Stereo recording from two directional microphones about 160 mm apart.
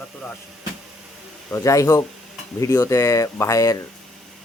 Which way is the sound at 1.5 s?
20° left (ahead or behind).